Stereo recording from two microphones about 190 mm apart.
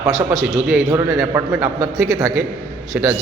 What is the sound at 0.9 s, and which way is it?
A man's voice, 15° right (ahead or behind).